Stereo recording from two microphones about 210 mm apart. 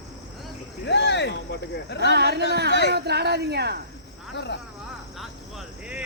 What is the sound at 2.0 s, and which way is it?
Speech, 50° right (ahead or behind).